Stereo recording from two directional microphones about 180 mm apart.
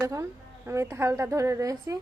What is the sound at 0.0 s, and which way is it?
A woman's voice, 15° right (ahead or behind).